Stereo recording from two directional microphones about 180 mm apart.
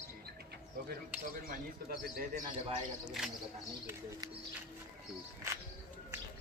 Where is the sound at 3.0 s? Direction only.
5° right (ahead or behind).